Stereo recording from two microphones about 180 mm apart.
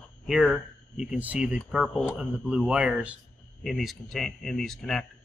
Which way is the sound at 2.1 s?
5° right (ahead or behind).